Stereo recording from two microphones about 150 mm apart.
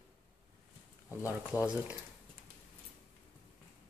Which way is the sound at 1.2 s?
10° right (ahead or behind).